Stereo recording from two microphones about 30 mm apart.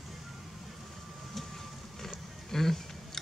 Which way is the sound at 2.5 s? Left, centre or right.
Centre.